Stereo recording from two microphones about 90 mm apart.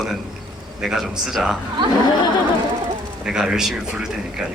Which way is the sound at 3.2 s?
5° right (ahead or behind).